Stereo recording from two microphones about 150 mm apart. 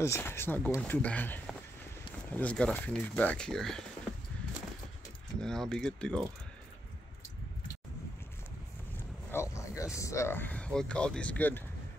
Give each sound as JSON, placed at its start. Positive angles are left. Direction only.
{"t": 0.0, "sound": "speech", "side_deg": 15}
{"t": 5.4, "sound": "speech", "side_deg": 5}
{"t": 9.3, "sound": "a sound", "side_deg": 20}
{"t": 9.9, "sound": "speech", "side_deg": 20}